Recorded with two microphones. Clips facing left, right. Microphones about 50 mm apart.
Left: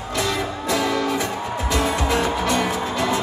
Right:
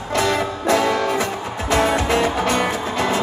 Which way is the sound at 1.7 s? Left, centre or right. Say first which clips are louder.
Right 4 dB; right.